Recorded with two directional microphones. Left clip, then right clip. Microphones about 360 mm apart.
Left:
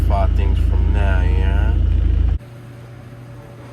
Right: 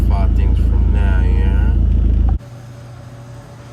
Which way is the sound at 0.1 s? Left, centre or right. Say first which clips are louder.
Left 3 dB; centre.